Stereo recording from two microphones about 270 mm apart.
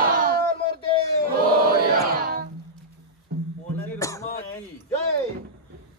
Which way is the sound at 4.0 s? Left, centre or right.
Centre.